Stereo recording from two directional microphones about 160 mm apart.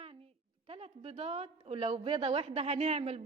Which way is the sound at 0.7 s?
40° right (ahead or behind).